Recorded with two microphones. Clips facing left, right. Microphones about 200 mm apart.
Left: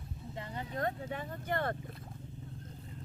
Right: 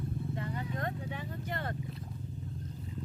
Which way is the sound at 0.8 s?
45° left (ahead or behind).